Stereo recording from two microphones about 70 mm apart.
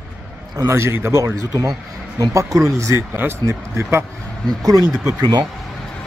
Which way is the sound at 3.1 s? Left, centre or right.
Right.